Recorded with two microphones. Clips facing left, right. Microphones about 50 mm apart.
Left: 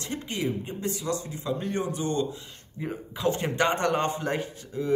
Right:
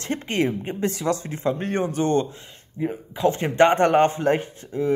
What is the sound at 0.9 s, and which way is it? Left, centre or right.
Speech, right.